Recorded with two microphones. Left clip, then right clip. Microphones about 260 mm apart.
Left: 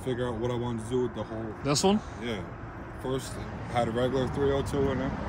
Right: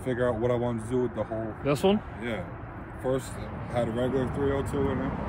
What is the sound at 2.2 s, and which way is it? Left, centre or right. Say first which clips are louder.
Speech: right 1 dB; centre.